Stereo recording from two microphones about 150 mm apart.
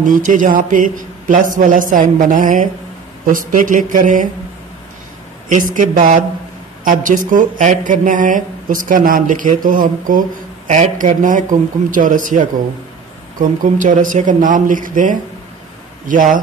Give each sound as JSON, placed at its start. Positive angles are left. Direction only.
{"t": 0.0, "sound": "speech", "side_deg": -60}
{"t": 5.5, "sound": "speech", "side_deg": -60}